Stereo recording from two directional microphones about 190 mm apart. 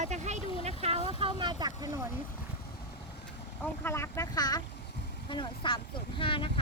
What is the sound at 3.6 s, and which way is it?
Speech, 15° left (ahead or behind).